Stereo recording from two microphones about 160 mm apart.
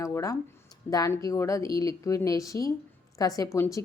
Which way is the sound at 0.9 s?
20° left (ahead or behind).